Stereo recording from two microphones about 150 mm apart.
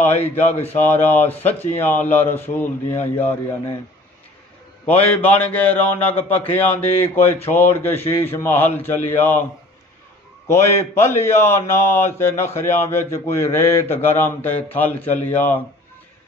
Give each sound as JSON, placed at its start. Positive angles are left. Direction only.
{"t": 0.0, "sound": "a man's voice", "side_deg": 15}
{"t": 4.8, "sound": "a man's voice", "side_deg": 10}
{"t": 10.5, "sound": "a man's voice", "side_deg": 15}